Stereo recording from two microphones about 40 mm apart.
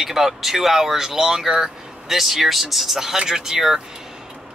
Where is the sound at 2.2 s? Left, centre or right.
Centre.